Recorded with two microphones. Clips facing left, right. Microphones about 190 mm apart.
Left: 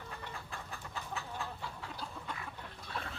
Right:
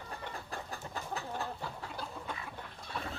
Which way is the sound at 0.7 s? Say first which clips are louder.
Right 2 dB; 40° right (ahead or behind).